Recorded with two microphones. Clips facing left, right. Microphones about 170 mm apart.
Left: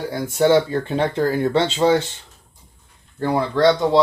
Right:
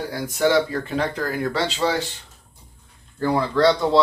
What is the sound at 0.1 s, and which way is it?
Speech, 25° left (ahead or behind).